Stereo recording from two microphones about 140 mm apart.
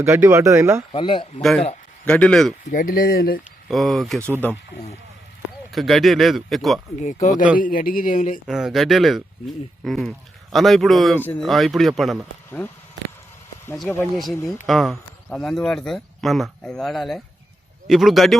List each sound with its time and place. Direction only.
0.0 s speech: 20° right (ahead or behind)
0.9 s speech: 35° left (ahead or behind)
1.4 s speech: 5° left (ahead or behind)
2.6 s speech: 75° left (ahead or behind)
3.7 s speech: centre (ahead or behind)
5.7 s speech: centre (ahead or behind)
7.0 s speech: 60° left (ahead or behind)
7.6 s speech: 90° left; by 8.4 s 70° left (ahead or behind)
8.4 s speech: 5° right (ahead or behind)
12.5 s speech: 15° left (ahead or behind)
13.9 s speech: 5° left (ahead or behind)